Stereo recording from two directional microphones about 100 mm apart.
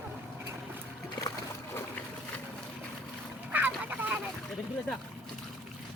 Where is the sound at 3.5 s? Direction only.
15° right (ahead or behind).